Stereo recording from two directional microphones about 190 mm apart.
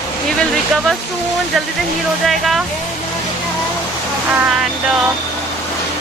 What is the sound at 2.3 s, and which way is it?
Speech, centre (ahead or behind).